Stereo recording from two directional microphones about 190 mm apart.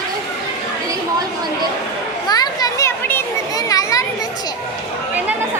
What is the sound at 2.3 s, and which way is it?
Children playing, 20° left (ahead or behind).